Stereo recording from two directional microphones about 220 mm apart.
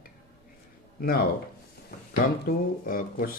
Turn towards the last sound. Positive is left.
turn(degrees=40)  # may be behind; listen again after turning